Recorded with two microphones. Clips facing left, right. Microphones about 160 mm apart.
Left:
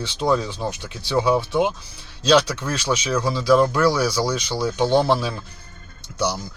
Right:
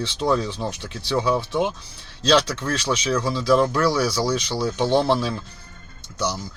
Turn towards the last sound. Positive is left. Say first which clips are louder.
# left 2 dB
turn(degrees=15)  # may be behind; listen again after turning